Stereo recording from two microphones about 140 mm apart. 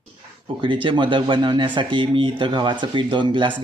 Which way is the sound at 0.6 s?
35° right (ahead or behind).